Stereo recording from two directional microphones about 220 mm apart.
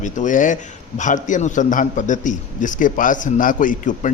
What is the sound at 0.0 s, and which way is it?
A man's voice, 35° left (ahead or behind).